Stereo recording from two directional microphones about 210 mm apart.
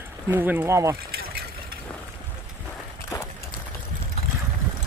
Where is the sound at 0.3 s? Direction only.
10° right (ahead or behind).